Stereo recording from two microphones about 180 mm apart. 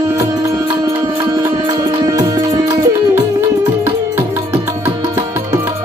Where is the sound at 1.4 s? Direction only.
20° right (ahead or behind).